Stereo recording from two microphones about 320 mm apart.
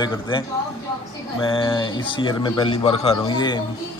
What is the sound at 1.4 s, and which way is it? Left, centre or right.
A man's voice, centre.